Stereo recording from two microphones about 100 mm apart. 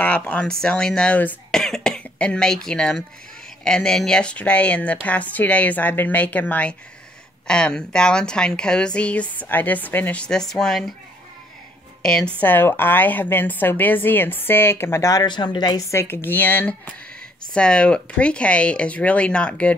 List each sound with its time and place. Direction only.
0.0 s a woman's voice: 15° left (ahead or behind)
12.0 s a woman's voice: 5° left (ahead or behind); by 15.2 s 30° left (ahead or behind)
15.2 s a woman's voice: 50° left (ahead or behind)
15.9 s a woman's voice: 25° left (ahead or behind)